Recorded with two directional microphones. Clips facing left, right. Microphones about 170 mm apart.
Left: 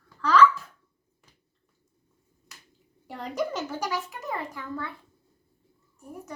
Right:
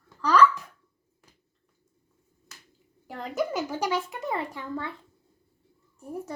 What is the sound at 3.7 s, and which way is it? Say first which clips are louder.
Speech: right 3 dB; 20° right (ahead or behind).